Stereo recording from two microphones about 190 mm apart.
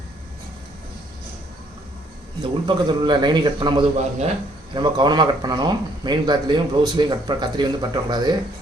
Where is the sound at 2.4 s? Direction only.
25° right (ahead or behind).